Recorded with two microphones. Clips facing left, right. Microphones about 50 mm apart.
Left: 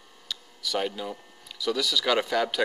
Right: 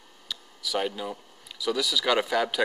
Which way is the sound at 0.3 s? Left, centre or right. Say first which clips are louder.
Even; centre.